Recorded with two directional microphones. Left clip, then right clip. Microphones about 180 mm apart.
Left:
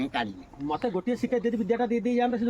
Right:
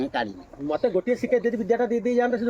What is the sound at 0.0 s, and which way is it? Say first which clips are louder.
Speech: right 3 dB; 65° left (ahead or behind).